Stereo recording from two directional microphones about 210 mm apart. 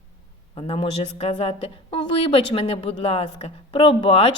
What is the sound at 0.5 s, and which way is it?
A woman's voice, 25° left (ahead or behind).